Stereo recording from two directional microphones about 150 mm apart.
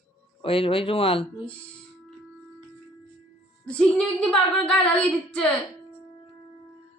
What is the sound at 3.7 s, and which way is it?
Female singing, 5° left (ahead or behind).